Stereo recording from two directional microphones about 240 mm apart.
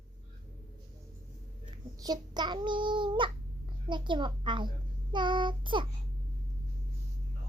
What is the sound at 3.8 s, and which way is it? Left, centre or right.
Speech, centre.